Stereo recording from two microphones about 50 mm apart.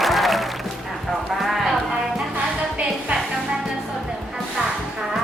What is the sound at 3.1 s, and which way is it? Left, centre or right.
Music, right.